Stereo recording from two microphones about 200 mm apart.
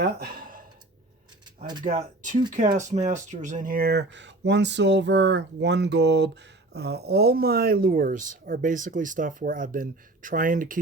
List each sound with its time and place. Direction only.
0.0 s speech: 50° right (ahead or behind)
1.8 s speech: 40° right (ahead or behind)